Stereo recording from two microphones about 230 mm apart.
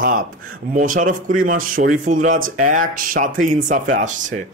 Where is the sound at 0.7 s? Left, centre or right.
Right.